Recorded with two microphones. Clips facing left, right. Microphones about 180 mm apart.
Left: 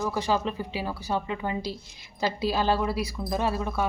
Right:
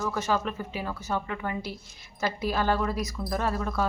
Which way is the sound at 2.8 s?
10° left (ahead or behind).